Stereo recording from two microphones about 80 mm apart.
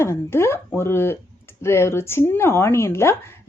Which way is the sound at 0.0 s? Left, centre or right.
Left.